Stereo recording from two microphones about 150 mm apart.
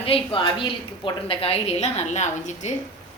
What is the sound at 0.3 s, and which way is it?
A woman's voice, 35° left (ahead or behind).